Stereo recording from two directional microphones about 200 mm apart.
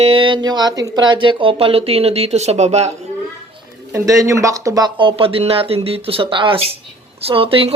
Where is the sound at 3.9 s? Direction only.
15° right (ahead or behind).